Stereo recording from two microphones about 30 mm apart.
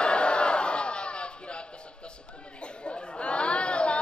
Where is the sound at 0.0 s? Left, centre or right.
Left.